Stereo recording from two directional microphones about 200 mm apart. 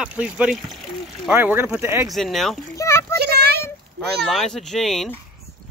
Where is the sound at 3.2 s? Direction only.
50° right (ahead or behind).